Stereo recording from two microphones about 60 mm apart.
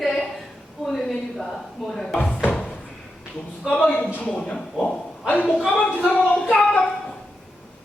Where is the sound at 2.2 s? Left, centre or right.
Left.